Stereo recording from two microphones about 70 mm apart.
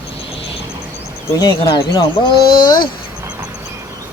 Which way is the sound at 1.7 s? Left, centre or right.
Left.